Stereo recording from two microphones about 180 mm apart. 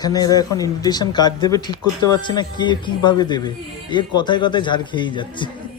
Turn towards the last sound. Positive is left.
turn(degrees=25)  # may be behind; listen again after turning